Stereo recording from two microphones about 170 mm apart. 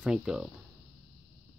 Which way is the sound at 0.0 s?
5° right (ahead or behind).